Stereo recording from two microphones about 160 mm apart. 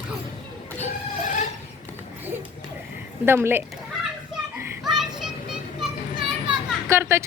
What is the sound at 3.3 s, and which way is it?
Speech, 15° right (ahead or behind).